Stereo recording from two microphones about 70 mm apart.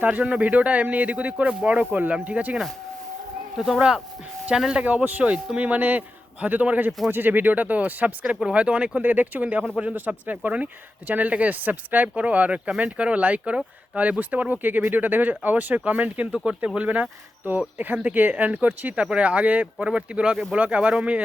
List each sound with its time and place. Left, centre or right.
0.0 s speech: centre
3.8 s speech: centre
20.3 s speech: centre
20.6 s speech: centre